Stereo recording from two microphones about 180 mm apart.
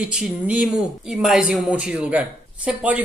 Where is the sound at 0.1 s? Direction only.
5° right (ahead or behind).